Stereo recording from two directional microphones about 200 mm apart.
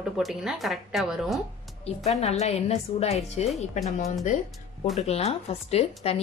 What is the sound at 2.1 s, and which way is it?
A woman's voice, 30° left (ahead or behind).